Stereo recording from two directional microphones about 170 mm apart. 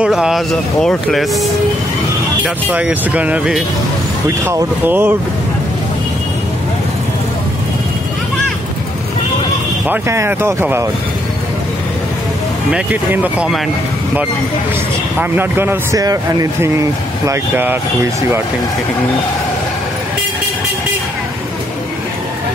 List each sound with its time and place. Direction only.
0.0 s speech: 5° right (ahead or behind)
2.4 s speech: 10° right (ahead or behind)
9.8 s speech: 15° right (ahead or behind)
12.7 s speech: 10° right (ahead or behind)
15.1 s speech: 10° right (ahead or behind)